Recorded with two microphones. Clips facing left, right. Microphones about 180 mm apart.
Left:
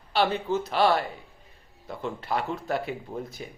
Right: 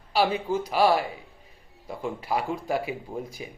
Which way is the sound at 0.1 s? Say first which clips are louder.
Right 1 dB; 10° right (ahead or behind).